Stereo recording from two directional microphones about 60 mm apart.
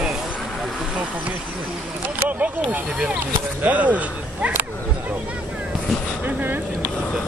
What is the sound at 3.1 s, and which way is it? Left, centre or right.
Speech, right.